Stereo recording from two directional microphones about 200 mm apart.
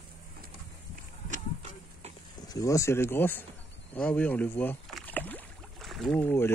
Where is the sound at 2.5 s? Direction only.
15° left (ahead or behind).